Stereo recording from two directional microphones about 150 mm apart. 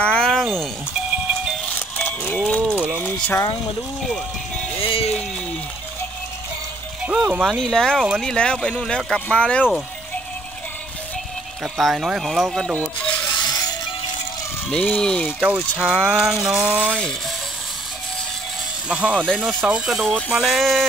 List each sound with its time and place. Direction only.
0.0 s a sound: 5° left (ahead or behind)
2.0 s livestock: 10° left (ahead or behind)
2.7 s a sound: 15° right (ahead or behind)
3.0 s speech: 15° left (ahead or behind)
4.8 s speech: 40° left (ahead or behind)
7.1 s speech: 5° right (ahead or behind)
11.6 s speech: centre (ahead or behind)
13.3 s music: 25° left (ahead or behind)
14.7 s speech: 10° left (ahead or behind)
15.8 s speech: 5° right (ahead or behind)
18.9 s speech: 10° right (ahead or behind)
19.1 s speech: 5° left (ahead or behind)
19.4 s speech: 5° right (ahead or behind)